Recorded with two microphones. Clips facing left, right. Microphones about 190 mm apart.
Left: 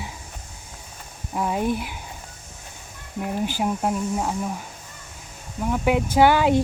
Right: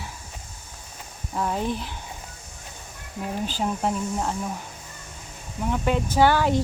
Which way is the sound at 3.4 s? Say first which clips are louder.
Left 2 dB; 10° left (ahead or behind).